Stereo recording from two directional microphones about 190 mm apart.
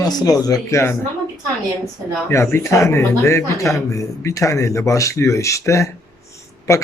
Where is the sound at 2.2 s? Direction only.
15° left (ahead or behind).